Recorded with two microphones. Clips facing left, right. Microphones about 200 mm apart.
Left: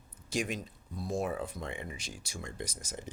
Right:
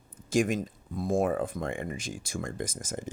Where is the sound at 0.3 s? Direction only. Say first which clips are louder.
Right 8 dB; 50° right (ahead or behind).